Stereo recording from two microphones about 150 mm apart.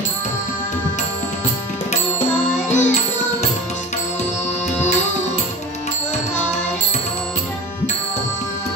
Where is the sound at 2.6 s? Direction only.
50° left (ahead or behind).